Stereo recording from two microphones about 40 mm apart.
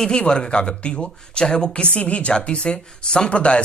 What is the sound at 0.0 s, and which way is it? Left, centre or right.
Speech, left.